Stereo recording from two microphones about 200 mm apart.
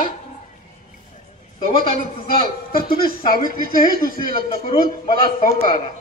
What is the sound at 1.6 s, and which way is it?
Speech, 25° left (ahead or behind).